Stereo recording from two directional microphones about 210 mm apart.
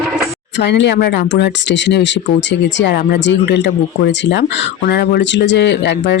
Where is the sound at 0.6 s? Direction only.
55° left (ahead or behind).